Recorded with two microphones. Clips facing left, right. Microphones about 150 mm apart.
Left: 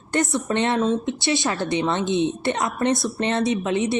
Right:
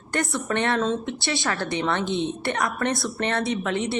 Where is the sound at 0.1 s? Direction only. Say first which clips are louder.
Left 3 dB; 20° left (ahead or behind).